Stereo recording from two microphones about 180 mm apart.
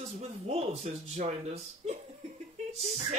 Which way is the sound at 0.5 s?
35° right (ahead or behind).